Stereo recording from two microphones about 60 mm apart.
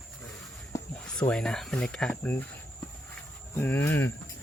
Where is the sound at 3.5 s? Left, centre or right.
Left.